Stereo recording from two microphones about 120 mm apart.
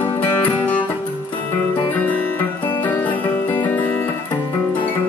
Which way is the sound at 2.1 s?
15° left (ahead or behind).